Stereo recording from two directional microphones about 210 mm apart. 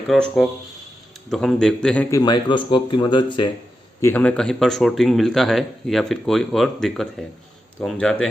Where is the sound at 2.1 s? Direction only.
20° left (ahead or behind).